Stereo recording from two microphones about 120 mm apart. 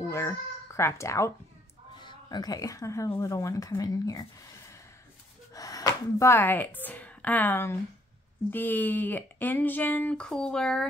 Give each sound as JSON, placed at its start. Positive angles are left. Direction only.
{"t": 0.1, "sound": "speech", "side_deg": 25}
{"t": 2.0, "sound": "a woman's voice", "side_deg": 40}